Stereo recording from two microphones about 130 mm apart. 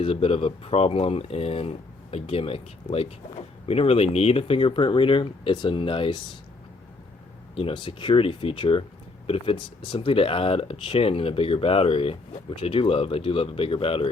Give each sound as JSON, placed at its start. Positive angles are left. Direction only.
{"t": 0.0, "sound": "speech", "side_deg": 45}
{"t": 7.5, "sound": "speech", "side_deg": 40}